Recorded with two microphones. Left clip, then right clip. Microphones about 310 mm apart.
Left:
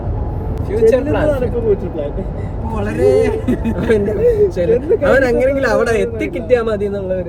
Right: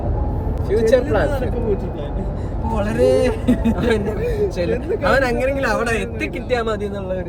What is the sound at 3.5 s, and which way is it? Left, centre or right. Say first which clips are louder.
Speech: left 3 dB; centre.